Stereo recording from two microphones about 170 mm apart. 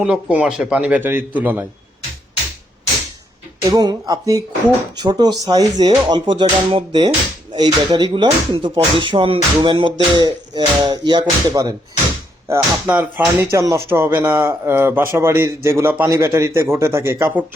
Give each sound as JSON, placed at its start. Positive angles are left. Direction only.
{"t": 0.0, "sound": "speech", "side_deg": -10}
{"t": 3.7, "sound": "speech", "side_deg": -25}
{"t": 12.5, "sound": "speech", "side_deg": -10}